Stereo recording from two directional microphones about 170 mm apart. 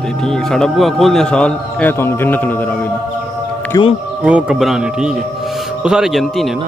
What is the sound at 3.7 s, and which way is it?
Speech, 20° left (ahead or behind).